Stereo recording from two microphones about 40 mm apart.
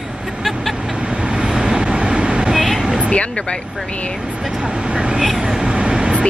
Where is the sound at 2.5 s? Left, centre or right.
Centre.